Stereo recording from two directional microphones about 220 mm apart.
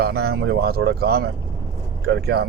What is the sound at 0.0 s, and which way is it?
Speech, 45° right (ahead or behind).